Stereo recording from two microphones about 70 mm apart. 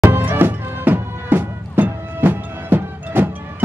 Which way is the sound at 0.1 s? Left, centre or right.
Right.